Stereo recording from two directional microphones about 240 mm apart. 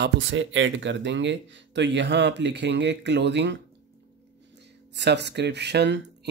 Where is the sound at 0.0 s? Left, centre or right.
Right.